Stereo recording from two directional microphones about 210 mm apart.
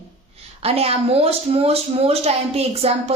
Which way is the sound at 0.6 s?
30° right (ahead or behind).